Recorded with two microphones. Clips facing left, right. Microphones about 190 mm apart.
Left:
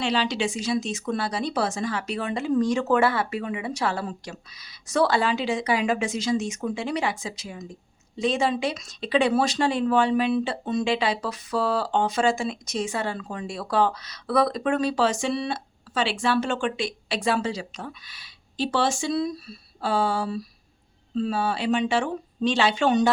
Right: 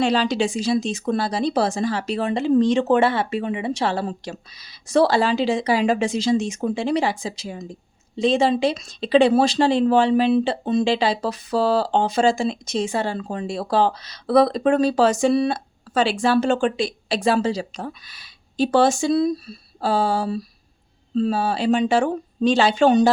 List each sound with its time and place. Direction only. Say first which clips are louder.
0.0 s speech: right 5 dB; 40° right (ahead or behind)